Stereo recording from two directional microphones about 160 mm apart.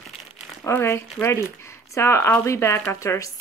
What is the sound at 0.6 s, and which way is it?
Speech, 15° left (ahead or behind).